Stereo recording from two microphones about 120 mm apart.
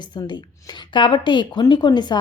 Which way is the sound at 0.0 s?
40° left (ahead or behind).